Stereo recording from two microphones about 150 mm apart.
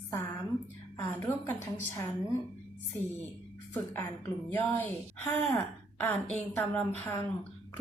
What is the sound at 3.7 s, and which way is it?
A woman's voice, 15° left (ahead or behind).